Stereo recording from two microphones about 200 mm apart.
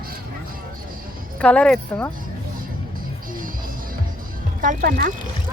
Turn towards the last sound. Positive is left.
turn(degrees=-45)  # may be behind; listen again after turning